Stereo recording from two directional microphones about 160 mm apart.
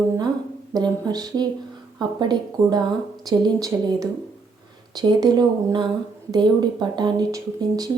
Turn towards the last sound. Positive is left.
turn(degrees=-25)  # may be behind; listen again after turning